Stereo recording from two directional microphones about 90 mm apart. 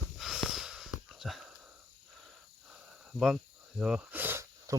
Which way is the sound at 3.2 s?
Centre (ahead or behind).